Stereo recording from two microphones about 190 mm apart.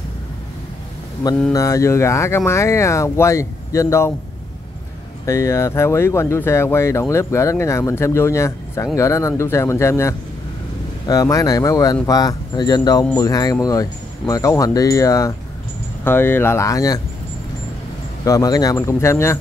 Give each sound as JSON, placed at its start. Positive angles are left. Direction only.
{"t": 1.5, "sound": "speech", "side_deg": 15}
{"t": 5.2, "sound": "speech", "side_deg": 15}
{"t": 18.2, "sound": "speech", "side_deg": 20}